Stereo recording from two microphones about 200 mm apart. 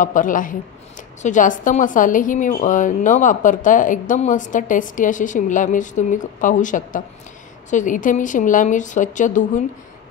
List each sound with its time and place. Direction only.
0.0 s a woman's voice: 40° left (ahead or behind)